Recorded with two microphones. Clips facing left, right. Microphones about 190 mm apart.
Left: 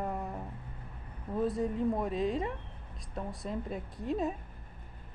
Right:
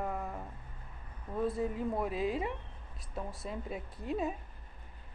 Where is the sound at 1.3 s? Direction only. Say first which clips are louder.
Left 2 dB; centre (ahead or behind).